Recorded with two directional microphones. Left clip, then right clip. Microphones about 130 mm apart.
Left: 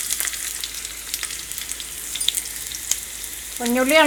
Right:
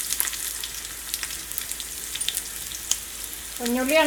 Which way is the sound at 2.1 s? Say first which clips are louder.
Left 6 dB; centre (ahead or behind).